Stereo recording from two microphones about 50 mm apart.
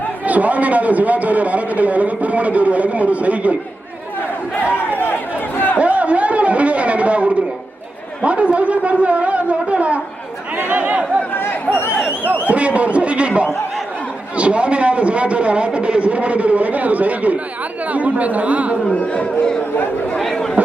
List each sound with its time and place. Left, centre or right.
0.3 s a man's voice: right
5.7 s a man's voice: right
12.3 s a man's voice: right
19.1 s speech: left